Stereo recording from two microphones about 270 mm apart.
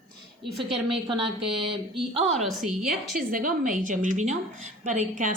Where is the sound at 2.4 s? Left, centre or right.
Centre.